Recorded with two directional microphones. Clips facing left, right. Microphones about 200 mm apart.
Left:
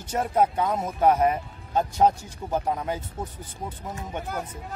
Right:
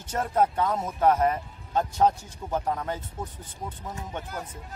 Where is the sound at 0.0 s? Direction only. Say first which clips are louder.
Left 2 dB; 10° left (ahead or behind).